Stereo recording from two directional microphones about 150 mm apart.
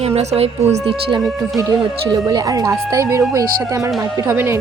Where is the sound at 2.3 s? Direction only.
25° right (ahead or behind).